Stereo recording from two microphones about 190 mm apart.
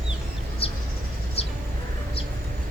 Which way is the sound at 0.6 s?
30° left (ahead or behind).